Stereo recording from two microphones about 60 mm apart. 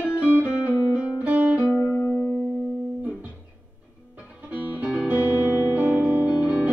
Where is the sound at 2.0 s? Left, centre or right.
Left.